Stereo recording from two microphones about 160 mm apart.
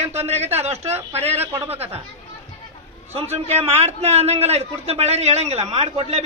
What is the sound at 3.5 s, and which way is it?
A man's voice, 40° right (ahead or behind).